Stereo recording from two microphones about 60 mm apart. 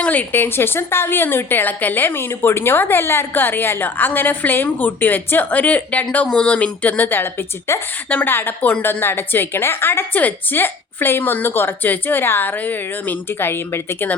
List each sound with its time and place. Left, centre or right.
0.0 s a sound: left
0.3 s a woman's voice: left
7.7 s a woman's voice: left
8.1 s a woman's voice: left